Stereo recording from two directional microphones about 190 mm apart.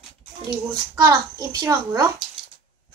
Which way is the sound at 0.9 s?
20° right (ahead or behind).